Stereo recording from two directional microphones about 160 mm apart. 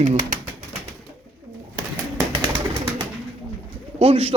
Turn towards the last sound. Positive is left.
turn(degrees=-35)  # may be behind; listen again after turning